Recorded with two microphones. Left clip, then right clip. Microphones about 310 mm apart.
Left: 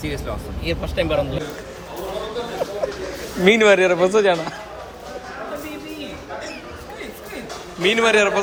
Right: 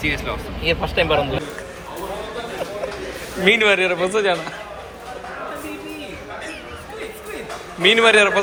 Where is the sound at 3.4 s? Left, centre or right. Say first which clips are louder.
Left 2 dB; centre.